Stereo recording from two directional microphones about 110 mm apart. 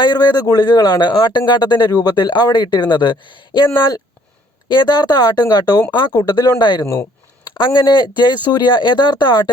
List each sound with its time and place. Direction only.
0.0 s speech: 40° left (ahead or behind)
6.8 s speech: 25° left (ahead or behind)
7.5 s speech: 45° left (ahead or behind)